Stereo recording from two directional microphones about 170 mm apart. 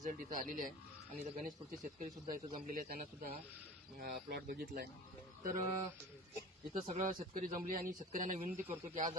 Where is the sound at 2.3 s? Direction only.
50° right (ahead or behind).